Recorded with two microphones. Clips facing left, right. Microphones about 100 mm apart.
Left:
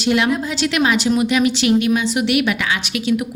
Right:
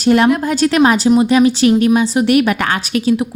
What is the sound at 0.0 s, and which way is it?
A woman's voice, 40° right (ahead or behind).